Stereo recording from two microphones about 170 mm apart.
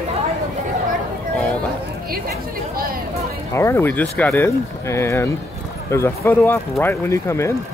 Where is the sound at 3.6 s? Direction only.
15° left (ahead or behind).